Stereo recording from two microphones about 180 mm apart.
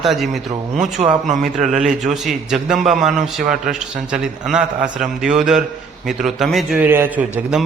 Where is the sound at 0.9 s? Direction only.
40° right (ahead or behind).